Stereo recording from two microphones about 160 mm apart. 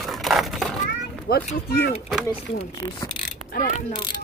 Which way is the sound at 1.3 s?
75° left (ahead or behind).